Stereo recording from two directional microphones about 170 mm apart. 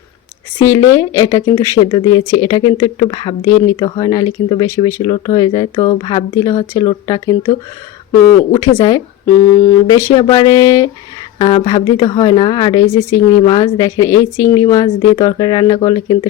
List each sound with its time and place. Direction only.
0.6 s speech: 20° left (ahead or behind)
8.5 s speech: 25° left (ahead or behind)